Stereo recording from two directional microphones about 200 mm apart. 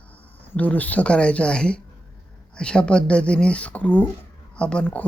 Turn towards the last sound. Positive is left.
turn(degrees=5)  # may be behind; listen again after turning